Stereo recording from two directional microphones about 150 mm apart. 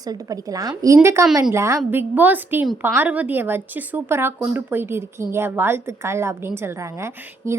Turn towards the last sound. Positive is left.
turn(degrees=-20)  # may be behind; listen again after turning